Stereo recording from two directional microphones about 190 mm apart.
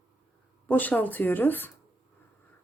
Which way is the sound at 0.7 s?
10° left (ahead or behind).